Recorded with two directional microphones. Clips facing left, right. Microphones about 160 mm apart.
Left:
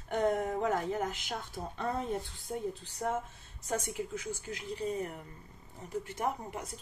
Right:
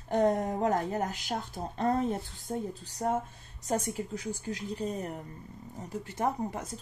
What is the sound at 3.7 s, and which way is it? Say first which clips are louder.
Speech: right 3 dB; 35° right (ahead or behind).